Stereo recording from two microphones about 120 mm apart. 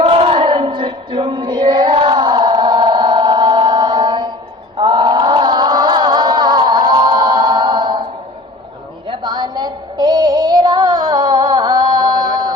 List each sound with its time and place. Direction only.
0.0 s a sound: 50° right (ahead or behind)
4.8 s chant: 40° right (ahead or behind)
9.0 s music: 40° right (ahead or behind)